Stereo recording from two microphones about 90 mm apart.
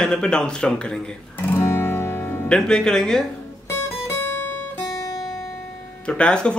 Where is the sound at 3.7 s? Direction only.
30° left (ahead or behind).